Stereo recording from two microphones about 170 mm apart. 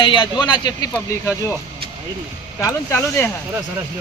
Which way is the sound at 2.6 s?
20° left (ahead or behind).